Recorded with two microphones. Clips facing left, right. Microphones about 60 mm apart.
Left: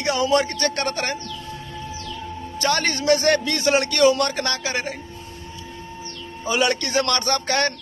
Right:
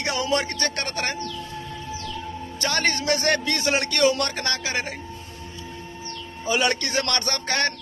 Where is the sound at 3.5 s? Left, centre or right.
Right.